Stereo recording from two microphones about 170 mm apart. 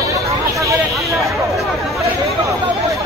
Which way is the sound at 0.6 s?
20° right (ahead or behind).